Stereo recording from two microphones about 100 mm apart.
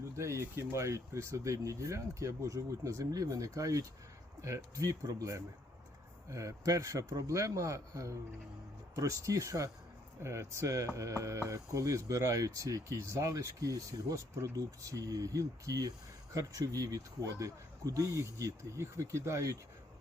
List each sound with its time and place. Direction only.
0.2 s speech: 25° right (ahead or behind)